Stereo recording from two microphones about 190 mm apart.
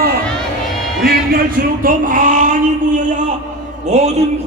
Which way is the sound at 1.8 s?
45° right (ahead or behind).